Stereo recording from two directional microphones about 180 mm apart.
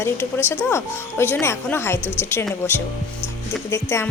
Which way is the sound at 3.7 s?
15° left (ahead or behind).